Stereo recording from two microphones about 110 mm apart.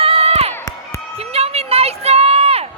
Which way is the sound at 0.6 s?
25° left (ahead or behind).